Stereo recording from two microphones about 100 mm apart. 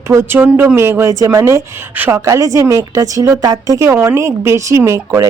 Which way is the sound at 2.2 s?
30° right (ahead or behind).